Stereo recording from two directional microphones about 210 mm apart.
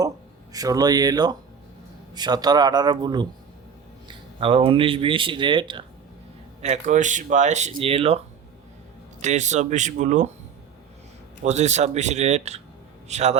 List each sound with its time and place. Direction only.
0.5 s speech: 15° right (ahead or behind)
6.6 s speech: 35° right (ahead or behind)
9.2 s speech: 35° right (ahead or behind)
11.4 s a man's voice: 35° right (ahead or behind)